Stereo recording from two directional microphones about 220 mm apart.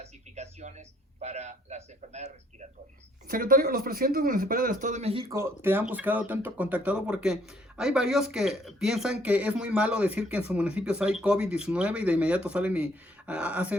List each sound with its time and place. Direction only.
0.0 s a man's voice: 30° right (ahead or behind)
5.3 s speech: 10° right (ahead or behind)